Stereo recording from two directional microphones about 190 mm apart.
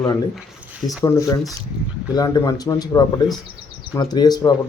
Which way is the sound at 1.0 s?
20° left (ahead or behind).